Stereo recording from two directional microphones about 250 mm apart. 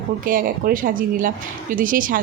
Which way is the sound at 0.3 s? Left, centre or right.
Right.